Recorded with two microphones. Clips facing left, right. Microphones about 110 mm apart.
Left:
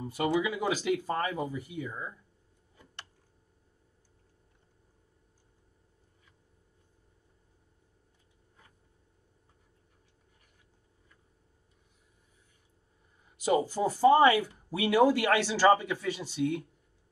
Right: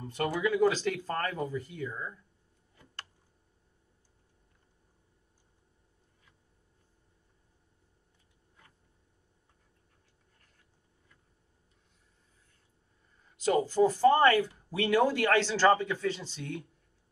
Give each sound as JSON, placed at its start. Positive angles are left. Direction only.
{"t": 0.0, "sound": "speech", "side_deg": 5}
{"t": 2.7, "sound": "a sound", "side_deg": 20}
{"t": 13.4, "sound": "speech", "side_deg": 15}